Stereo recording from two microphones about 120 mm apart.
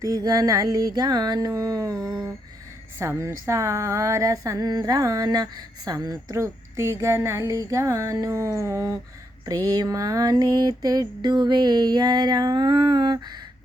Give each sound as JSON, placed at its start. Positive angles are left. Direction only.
{"t": 0.0, "sound": "music", "side_deg": -30}
{"t": 3.0, "sound": "speech", "side_deg": -25}
{"t": 9.6, "sound": "music", "side_deg": -30}